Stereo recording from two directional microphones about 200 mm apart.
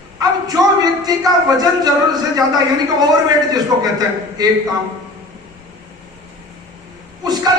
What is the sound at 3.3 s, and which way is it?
A man's voice, 20° right (ahead or behind).